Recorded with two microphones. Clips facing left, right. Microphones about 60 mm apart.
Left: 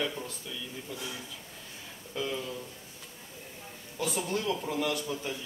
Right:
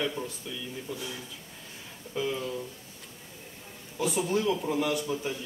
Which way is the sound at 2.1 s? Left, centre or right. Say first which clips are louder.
Right 3 dB; centre.